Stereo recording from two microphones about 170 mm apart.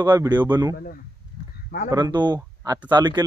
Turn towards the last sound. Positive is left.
turn(degrees=-25)  # may be behind; listen again after turning